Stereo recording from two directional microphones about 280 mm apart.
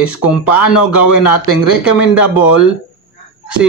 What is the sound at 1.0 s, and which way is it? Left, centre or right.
Speech, left.